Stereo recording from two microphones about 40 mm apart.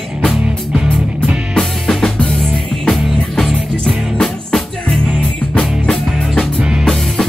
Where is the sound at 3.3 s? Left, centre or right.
Centre.